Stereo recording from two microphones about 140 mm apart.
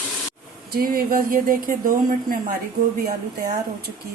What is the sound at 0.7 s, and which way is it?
Speech, 90° right.